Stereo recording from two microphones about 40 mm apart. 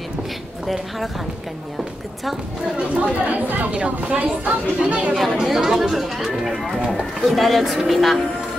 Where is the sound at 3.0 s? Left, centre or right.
Right.